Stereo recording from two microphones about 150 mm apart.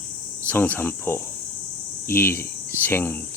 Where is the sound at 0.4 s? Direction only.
10° left (ahead or behind).